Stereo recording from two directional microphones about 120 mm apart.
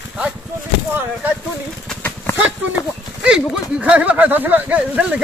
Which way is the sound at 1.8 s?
10° left (ahead or behind).